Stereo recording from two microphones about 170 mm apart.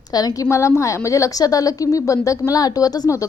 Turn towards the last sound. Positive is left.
turn(degrees=20)  # may be behind; listen again after turning